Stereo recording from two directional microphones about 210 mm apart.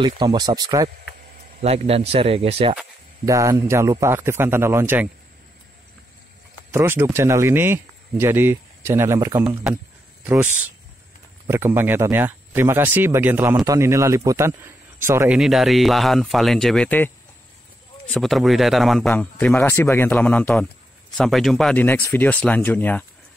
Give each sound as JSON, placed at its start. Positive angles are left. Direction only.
{"t": 0.0, "sound": "speech", "side_deg": -20}
{"t": 1.6, "sound": "speech", "side_deg": -30}
{"t": 3.3, "sound": "speech", "side_deg": -15}
{"t": 6.7, "sound": "speech", "side_deg": -10}